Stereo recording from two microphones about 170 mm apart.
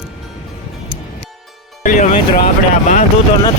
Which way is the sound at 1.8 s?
50° left (ahead or behind).